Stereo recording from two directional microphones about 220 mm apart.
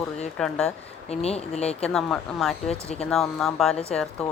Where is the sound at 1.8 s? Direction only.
Centre (ahead or behind).